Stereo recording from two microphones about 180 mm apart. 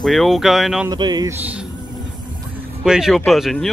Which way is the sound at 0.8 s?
25° right (ahead or behind).